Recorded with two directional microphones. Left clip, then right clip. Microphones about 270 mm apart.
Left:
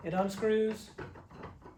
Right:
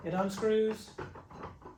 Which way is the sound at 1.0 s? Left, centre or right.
Centre.